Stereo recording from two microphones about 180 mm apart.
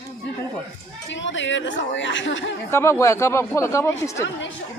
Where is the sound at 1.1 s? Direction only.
90° left.